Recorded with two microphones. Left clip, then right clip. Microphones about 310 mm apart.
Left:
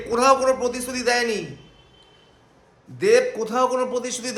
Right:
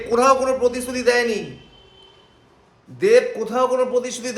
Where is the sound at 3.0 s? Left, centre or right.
Centre.